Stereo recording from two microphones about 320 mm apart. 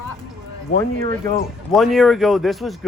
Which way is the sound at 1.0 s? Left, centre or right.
Right.